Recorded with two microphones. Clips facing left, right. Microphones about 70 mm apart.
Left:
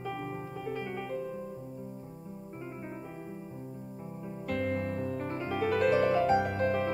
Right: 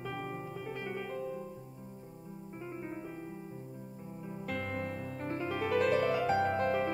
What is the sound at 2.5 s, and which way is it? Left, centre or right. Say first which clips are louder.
Music: right 1 dB; centre.